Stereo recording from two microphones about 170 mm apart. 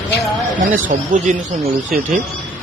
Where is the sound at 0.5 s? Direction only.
50° right (ahead or behind).